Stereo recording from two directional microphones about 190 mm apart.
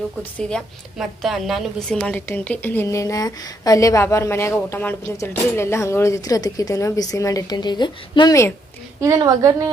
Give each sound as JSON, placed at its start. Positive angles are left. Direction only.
{"t": 0.3, "sound": "a woman's voice", "side_deg": 0}
{"t": 9.0, "sound": "a woman's voice", "side_deg": -20}